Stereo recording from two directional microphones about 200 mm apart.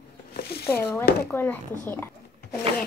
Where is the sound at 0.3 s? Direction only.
50° left (ahead or behind).